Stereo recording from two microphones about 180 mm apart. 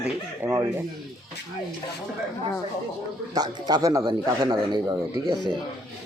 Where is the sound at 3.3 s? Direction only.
20° right (ahead or behind).